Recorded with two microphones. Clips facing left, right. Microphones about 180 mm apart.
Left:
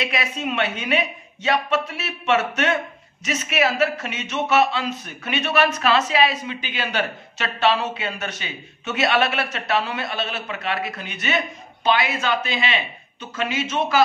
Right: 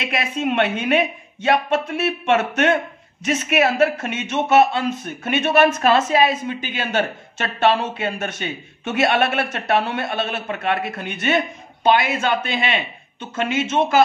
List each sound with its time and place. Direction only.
0.0 s speech: 55° right (ahead or behind)